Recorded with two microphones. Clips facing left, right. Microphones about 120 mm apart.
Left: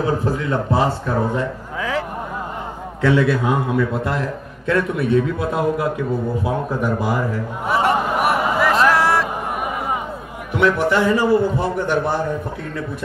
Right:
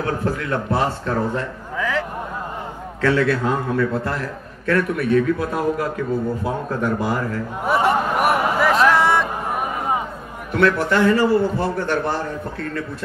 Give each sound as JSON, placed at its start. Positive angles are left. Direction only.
{"t": 0.0, "sound": "a man's voice", "side_deg": 15}
{"t": 7.6, "sound": "a sound", "side_deg": 0}
{"t": 10.5, "sound": "a man's voice", "side_deg": 15}